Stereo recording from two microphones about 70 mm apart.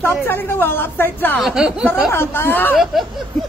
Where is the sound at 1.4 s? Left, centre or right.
Centre.